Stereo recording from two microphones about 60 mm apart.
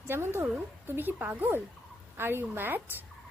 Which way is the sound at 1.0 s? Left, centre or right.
Right.